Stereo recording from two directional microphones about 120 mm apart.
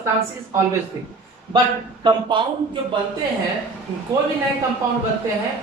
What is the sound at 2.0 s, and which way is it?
Speech, 40° right (ahead or behind).